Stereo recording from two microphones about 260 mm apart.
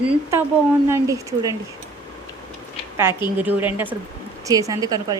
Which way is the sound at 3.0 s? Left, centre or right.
Centre.